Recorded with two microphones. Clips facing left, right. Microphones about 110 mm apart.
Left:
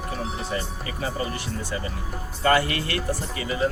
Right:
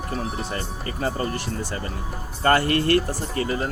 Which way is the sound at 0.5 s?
50° right (ahead or behind).